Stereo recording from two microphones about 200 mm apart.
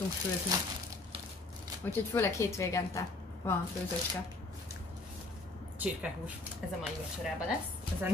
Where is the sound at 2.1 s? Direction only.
15° left (ahead or behind).